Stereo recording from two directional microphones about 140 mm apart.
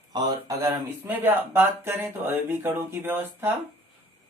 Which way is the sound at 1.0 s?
15° right (ahead or behind).